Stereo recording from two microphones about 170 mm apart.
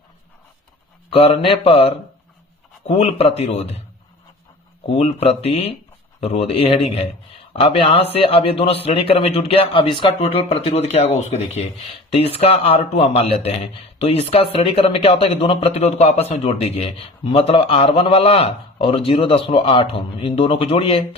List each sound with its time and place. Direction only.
1.1 s a man's voice: 35° left (ahead or behind)
4.9 s a man's voice: 40° left (ahead or behind)